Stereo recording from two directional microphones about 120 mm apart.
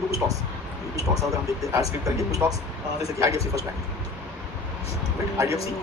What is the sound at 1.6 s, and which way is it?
Speech, 25° right (ahead or behind).